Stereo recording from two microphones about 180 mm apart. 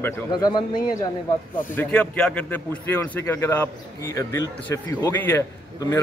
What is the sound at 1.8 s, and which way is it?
A man's voice, 5° left (ahead or behind).